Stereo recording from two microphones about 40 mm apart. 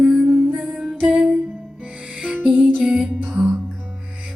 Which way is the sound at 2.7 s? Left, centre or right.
Right.